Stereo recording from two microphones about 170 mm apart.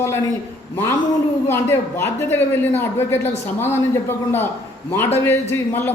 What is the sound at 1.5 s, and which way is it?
A man's voice, 15° left (ahead or behind).